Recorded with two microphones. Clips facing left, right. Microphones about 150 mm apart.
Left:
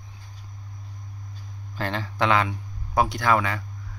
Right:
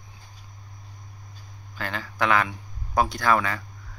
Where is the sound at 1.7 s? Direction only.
30° left (ahead or behind).